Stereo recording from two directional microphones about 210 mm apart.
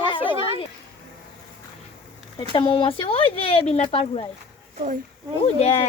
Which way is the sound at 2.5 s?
25° left (ahead or behind).